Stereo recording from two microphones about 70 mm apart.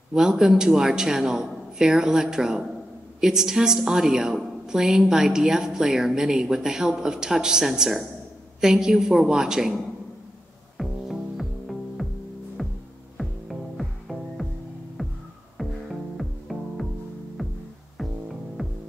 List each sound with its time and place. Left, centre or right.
0.1 s a woman's voice: centre
10.8 s music: centre
12.6 s hum: centre
13.2 s music: centre
15.0 s throbbing: centre
15.5 s music: centre